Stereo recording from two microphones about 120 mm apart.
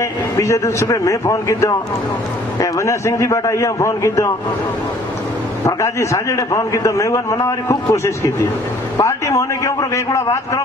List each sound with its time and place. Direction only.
0.4 s a man's voice: 25° left (ahead or behind)
5.7 s a man's voice: 25° left (ahead or behind)